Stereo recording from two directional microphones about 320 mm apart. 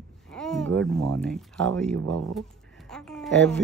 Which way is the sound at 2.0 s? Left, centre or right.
Right.